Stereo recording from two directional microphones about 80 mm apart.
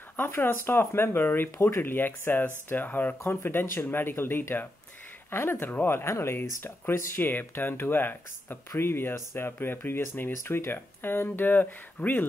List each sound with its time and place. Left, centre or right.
0.1 s speech: left